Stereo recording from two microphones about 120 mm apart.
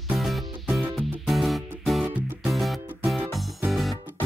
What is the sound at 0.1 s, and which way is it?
Music, centre (ahead or behind).